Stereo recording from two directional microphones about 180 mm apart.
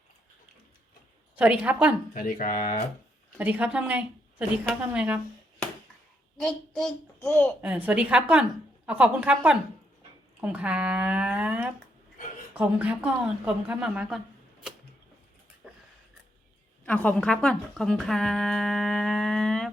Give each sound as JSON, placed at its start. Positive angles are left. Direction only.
{"t": 1.4, "sound": "a woman's voice", "side_deg": -5}
{"t": 2.1, "sound": "speech", "side_deg": 50}
{"t": 3.3, "sound": "a woman's voice", "side_deg": -10}
{"t": 6.3, "sound": "a child's voice", "side_deg": 0}
{"t": 7.2, "sound": "a child's voice", "side_deg": 15}
{"t": 7.6, "sound": "a woman's voice", "side_deg": -10}
{"t": 15.6, "sound": "a sound", "side_deg": -5}
{"t": 16.8, "sound": "speech", "side_deg": 10}